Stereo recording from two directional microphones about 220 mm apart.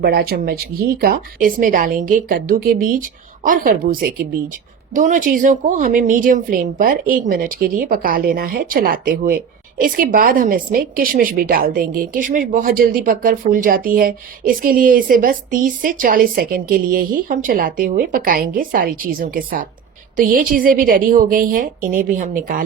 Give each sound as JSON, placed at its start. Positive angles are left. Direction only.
{"t": 0.0, "sound": "a woman's voice", "side_deg": -45}